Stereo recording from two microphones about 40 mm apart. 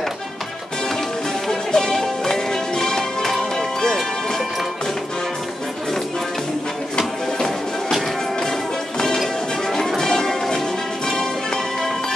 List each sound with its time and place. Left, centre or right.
1.5 s music: centre
7.0 s music: centre